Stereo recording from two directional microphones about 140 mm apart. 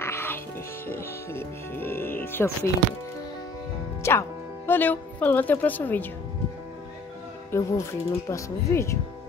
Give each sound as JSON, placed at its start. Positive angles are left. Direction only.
{"t": 0.0, "sound": "music", "side_deg": 15}
{"t": 0.8, "sound": "speech", "side_deg": 15}
{"t": 4.0, "sound": "speech", "side_deg": 20}
{"t": 7.5, "sound": "speech", "side_deg": 20}